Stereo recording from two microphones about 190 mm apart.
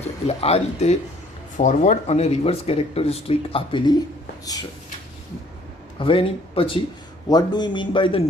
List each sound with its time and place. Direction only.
0.3 s speech: 35° left (ahead or behind)
6.0 s speech: 30° left (ahead or behind)